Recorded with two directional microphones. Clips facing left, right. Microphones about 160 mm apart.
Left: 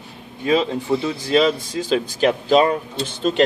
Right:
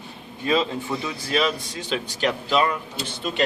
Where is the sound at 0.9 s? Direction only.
30° left (ahead or behind).